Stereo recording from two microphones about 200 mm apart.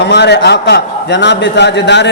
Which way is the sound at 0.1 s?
60° left (ahead or behind).